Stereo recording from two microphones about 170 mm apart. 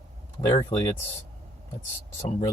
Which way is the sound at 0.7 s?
35° left (ahead or behind).